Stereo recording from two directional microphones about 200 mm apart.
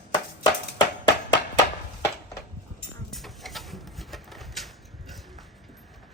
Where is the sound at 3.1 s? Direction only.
Centre (ahead or behind).